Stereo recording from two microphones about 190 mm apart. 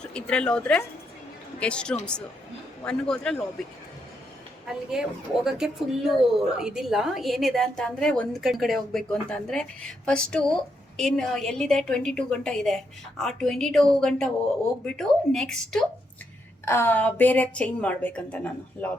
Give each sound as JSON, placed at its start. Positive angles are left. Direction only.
{"t": 0.0, "sound": "a woman's voice", "side_deg": 5}
{"t": 4.7, "sound": "a woman's voice", "side_deg": -5}